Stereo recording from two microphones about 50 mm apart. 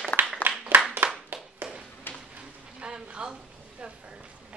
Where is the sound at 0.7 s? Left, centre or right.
Right.